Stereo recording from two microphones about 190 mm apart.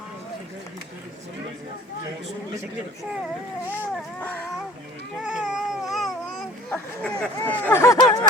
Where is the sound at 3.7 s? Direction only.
10° left (ahead or behind).